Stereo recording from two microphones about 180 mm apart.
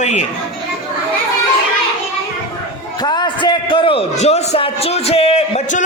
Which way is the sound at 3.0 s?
25° left (ahead or behind).